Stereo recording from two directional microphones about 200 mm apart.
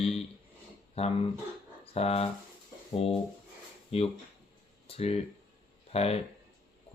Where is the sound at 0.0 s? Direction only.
30° left (ahead or behind).